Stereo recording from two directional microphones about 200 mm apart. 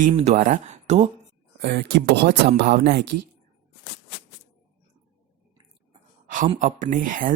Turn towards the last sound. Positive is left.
turn(degrees=-40)  # may be behind; listen again after turning